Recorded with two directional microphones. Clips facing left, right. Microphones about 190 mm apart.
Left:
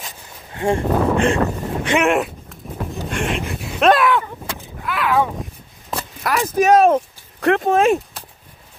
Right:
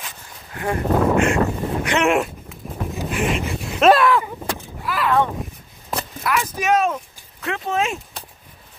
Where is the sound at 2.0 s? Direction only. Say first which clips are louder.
Left 1 dB; centre (ahead or behind).